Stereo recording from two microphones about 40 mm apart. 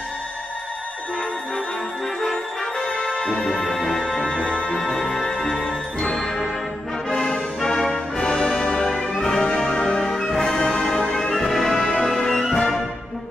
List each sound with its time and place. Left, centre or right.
2.8 s music: centre
3.4 s music: centre
4.7 s organ: centre
7.1 s music: centre
9.9 s orchestra: centre
11.3 s music: centre